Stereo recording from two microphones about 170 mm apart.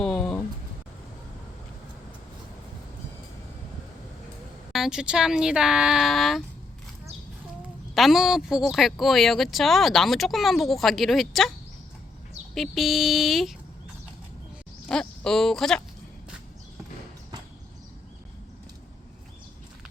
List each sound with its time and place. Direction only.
0.0 s a sound: 5° left (ahead or behind)
4.7 s speech: 5° right (ahead or behind)
7.9 s speech: centre (ahead or behind)
12.5 s speech: centre (ahead or behind)
14.8 s speech: 5° left (ahead or behind)